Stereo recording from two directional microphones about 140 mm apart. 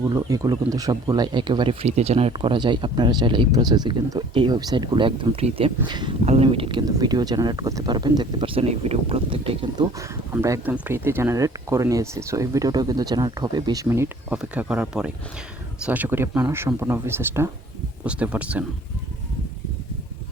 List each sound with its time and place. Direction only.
0.0 s speech: 25° right (ahead or behind)
1.8 s speech: 45° right (ahead or behind); by 6.1 s 30° right (ahead or behind)
6.2 s speech: 45° right (ahead or behind)
10.0 s speech: 20° right (ahead or behind)
13.8 s speech: 20° right (ahead or behind)